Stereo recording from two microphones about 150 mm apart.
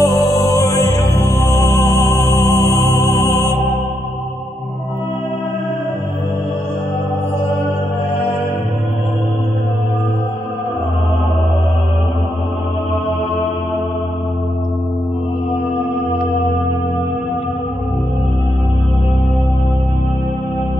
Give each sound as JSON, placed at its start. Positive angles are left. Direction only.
{"t": 0.0, "sound": "music", "side_deg": 25}